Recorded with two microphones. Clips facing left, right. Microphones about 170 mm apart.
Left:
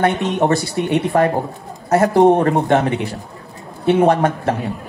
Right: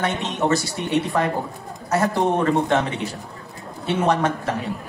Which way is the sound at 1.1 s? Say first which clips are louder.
Left 9 dB; 40° left (ahead or behind).